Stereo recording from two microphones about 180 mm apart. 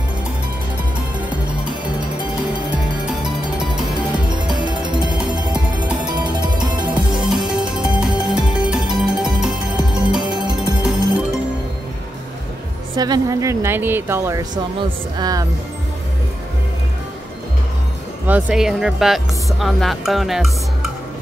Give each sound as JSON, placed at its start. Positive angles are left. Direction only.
{"t": 4.4, "sound": "music", "side_deg": -25}
{"t": 7.2, "sound": "music", "side_deg": 0}
{"t": 9.7, "sound": "music", "side_deg": -25}
{"t": 12.9, "sound": "speech", "side_deg": -20}
{"t": 18.2, "sound": "speech", "side_deg": -5}